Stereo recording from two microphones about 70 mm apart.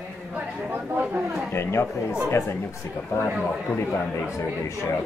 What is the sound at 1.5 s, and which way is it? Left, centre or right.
Speech, left.